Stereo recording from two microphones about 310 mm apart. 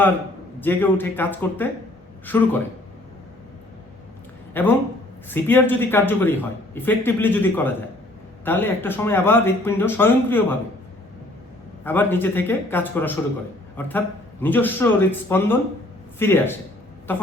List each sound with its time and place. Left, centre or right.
0.6 s a man's voice: centre
4.6 s a man's voice: centre
11.8 s a man's voice: centre